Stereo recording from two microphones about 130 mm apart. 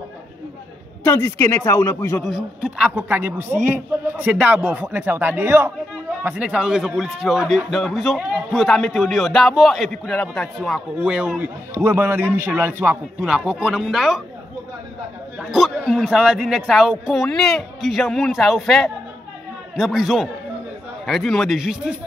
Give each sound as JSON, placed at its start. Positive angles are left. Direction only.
{"t": 1.0, "sound": "speech", "side_deg": 20}
{"t": 2.2, "sound": "a man's voice", "side_deg": -5}
{"t": 15.3, "sound": "a man's voice", "side_deg": 0}